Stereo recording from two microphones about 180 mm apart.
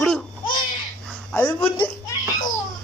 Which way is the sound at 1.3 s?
10° left (ahead or behind).